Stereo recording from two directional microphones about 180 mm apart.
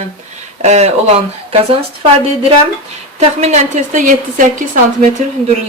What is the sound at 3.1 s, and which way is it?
Speech, 40° right (ahead or behind).